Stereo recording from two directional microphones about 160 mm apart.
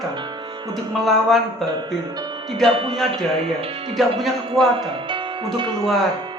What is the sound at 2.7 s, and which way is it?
Speech, 35° right (ahead or behind).